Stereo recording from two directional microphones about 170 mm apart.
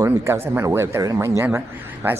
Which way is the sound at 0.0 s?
15° right (ahead or behind).